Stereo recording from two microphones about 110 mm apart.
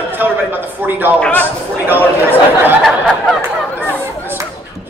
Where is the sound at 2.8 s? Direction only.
Centre (ahead or behind).